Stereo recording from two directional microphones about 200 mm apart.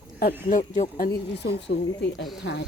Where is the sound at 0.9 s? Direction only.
50° left (ahead or behind).